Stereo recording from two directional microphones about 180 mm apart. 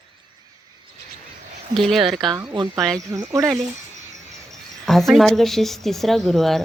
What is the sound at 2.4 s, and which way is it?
Speech, 25° right (ahead or behind).